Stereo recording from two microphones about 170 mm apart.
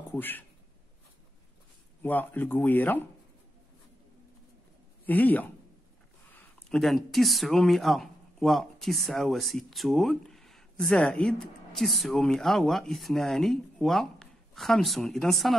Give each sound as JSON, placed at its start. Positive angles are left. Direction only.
{"t": 0.1, "sound": "speech", "side_deg": 10}
{"t": 2.0, "sound": "speech", "side_deg": 10}
{"t": 5.0, "sound": "speech", "side_deg": 10}